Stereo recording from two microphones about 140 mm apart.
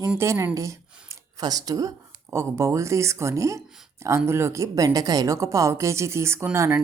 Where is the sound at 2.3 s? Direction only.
20° right (ahead or behind).